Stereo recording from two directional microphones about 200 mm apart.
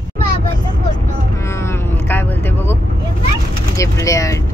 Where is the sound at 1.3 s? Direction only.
15° left (ahead or behind).